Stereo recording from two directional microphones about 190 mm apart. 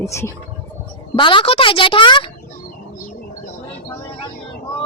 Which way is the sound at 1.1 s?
25° left (ahead or behind).